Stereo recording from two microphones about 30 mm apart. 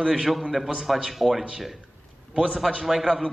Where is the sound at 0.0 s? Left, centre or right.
Centre.